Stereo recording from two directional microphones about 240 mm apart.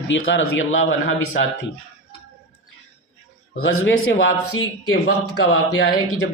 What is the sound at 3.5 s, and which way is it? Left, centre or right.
Speech, left.